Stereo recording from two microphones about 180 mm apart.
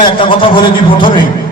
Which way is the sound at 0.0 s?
30° left (ahead or behind).